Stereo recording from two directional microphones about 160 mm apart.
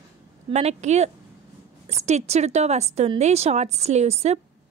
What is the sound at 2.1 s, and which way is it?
A woman's voice, 45° right (ahead or behind).